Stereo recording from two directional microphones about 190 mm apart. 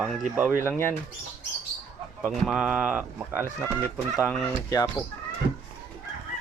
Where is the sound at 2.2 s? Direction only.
5° right (ahead or behind).